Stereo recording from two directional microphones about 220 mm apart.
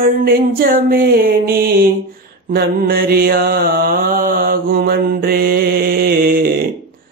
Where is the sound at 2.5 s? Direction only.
45° right (ahead or behind).